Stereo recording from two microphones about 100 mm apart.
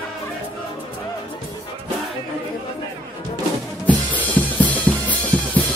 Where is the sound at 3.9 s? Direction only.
15° left (ahead or behind).